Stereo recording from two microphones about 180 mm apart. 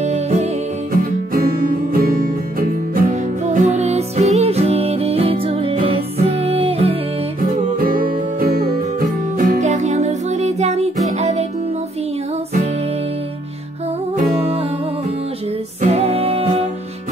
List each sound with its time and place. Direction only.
0.0 s music: 40° right (ahead or behind)
2.0 s music: 50° right (ahead or behind); by 7.0 s 35° right (ahead or behind)
7.6 s music: 50° right (ahead or behind)
9.4 s music: 45° right (ahead or behind)
15.8 s music: 35° right (ahead or behind)